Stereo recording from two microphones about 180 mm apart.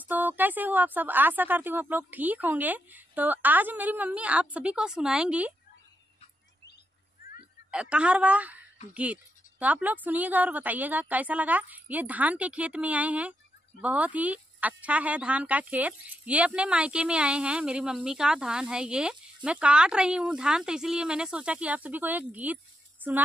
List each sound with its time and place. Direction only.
0.0 s speech: 10° right (ahead or behind)
7.7 s speech: 5° right (ahead or behind)